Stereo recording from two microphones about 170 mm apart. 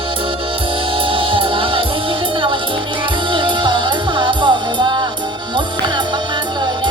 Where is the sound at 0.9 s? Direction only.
30° right (ahead or behind).